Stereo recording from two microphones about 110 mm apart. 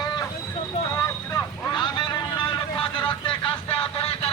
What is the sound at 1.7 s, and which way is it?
Vehicle, 45° left (ahead or behind).